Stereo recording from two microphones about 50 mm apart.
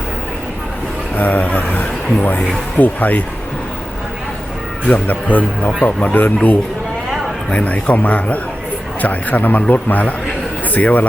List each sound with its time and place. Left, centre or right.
1.1 s speech: left
4.9 s speech: left